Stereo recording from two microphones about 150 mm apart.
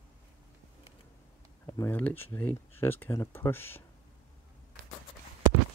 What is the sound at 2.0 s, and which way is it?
Speech, 10° left (ahead or behind).